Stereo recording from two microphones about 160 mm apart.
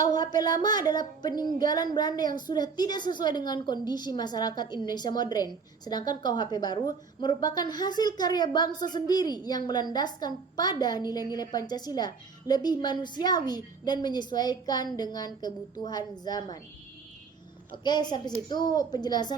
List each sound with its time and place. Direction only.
0.0 s a woman's voice: 25° left (ahead or behind)
17.8 s a woman's voice: 25° left (ahead or behind)